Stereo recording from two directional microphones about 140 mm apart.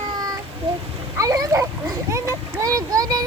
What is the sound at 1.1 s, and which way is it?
Splash, 25° right (ahead or behind).